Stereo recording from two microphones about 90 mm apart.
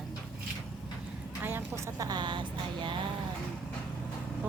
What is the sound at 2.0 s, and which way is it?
Speech, 50° right (ahead or behind).